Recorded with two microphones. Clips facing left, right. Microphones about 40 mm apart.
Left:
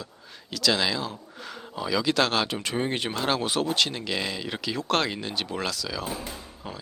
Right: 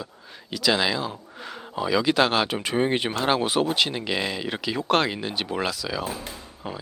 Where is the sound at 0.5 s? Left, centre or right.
Centre.